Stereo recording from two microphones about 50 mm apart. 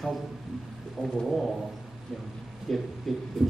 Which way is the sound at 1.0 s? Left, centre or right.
Left.